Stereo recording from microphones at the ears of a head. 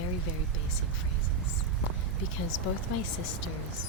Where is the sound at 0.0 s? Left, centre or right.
Left.